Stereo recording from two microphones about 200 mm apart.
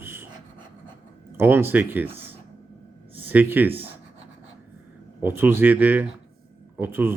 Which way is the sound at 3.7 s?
30° right (ahead or behind).